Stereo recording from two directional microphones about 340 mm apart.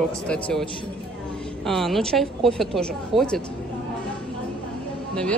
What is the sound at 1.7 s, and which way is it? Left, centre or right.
A woman's voice, centre.